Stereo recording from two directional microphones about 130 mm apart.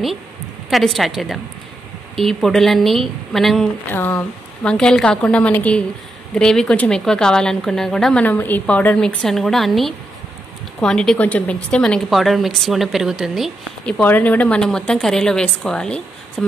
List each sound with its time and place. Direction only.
0.7 s a woman's voice: centre (ahead or behind)
3.9 s a woman's voice: 15° left (ahead or behind); by 13.5 s centre (ahead or behind)
13.8 s a woman's voice: 10° left (ahead or behind)